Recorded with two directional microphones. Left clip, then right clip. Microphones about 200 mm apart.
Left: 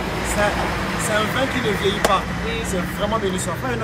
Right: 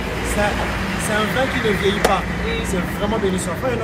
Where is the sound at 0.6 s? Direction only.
45° left (ahead or behind).